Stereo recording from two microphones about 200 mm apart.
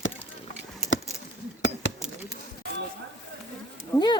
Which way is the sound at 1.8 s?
70° left (ahead or behind).